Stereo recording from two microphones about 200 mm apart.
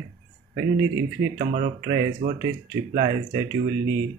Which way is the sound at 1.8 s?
20° right (ahead or behind).